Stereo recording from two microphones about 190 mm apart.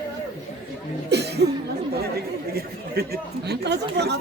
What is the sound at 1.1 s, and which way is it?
Chuckle, 60° right (ahead or behind).